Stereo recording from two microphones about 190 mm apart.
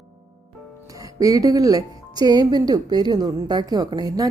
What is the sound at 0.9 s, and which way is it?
Speech, 20° right (ahead or behind).